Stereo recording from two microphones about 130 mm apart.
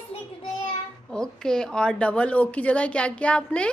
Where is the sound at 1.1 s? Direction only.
5° left (ahead or behind).